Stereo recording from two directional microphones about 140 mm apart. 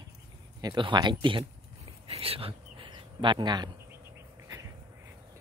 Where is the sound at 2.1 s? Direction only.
45° right (ahead or behind).